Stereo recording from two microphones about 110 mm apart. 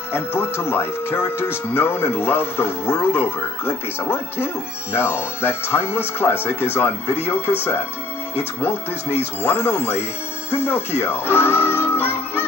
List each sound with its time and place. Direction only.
0.1 s speech: 20° left (ahead or behind)
9.2 s speech: 20° left (ahead or behind)